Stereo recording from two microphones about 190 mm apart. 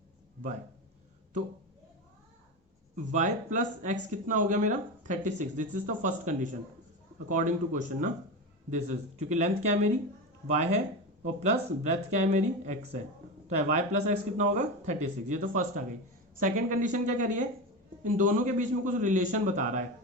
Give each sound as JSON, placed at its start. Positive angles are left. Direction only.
{"t": 2.9, "sound": "speech", "side_deg": -40}